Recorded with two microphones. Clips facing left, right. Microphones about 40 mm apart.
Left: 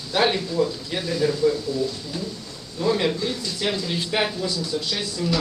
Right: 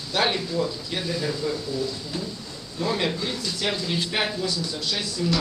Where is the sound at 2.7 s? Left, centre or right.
Centre.